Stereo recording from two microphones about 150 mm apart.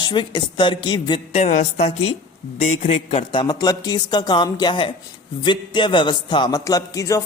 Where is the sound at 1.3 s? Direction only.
45° left (ahead or behind).